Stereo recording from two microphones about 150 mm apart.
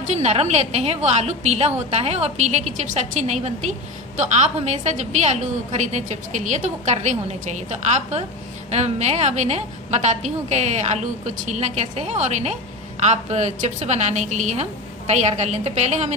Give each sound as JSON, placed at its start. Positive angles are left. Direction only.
{"t": 0.0, "sound": "a woman's voice", "side_deg": -50}